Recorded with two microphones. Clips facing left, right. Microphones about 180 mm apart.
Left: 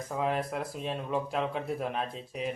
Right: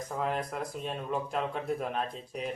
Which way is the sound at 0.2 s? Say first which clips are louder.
Left 2 dB; centre (ahead or behind).